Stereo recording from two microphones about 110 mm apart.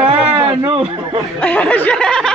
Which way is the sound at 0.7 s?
50° right (ahead or behind).